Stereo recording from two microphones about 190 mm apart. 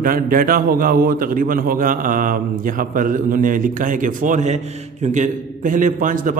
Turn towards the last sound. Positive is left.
turn(degrees=-45)  # may be behind; listen again after turning